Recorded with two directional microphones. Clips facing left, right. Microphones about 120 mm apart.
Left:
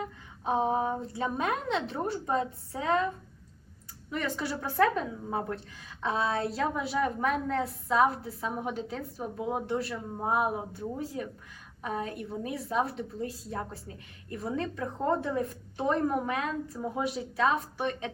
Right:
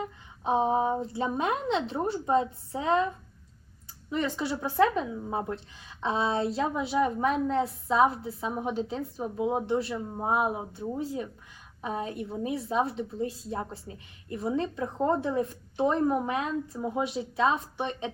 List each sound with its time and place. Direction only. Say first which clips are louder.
0.0 s a woman's voice: right 2 dB; 25° right (ahead or behind)
4.1 s a woman's voice: right 3 dB; 25° right (ahead or behind)